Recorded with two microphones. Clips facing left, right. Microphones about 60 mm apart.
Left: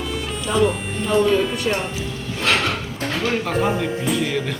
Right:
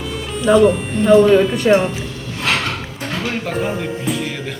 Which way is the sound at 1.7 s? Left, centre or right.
Right.